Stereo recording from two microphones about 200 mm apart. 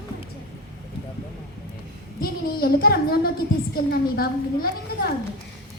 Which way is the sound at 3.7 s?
50° left (ahead or behind).